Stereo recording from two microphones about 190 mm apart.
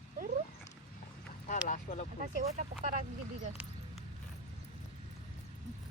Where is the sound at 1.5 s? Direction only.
40° left (ahead or behind).